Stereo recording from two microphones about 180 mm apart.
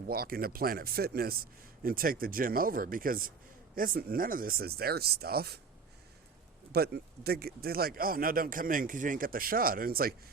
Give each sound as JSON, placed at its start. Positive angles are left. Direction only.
{"t": 0.1, "sound": "speech", "side_deg": -55}
{"t": 6.7, "sound": "speech", "side_deg": -60}